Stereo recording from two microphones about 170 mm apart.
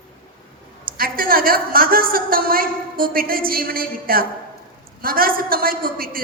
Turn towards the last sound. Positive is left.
turn(degrees=-60)  # may be behind; listen again after turning